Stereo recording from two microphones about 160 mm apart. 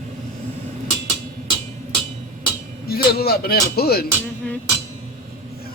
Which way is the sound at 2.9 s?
75° left (ahead or behind).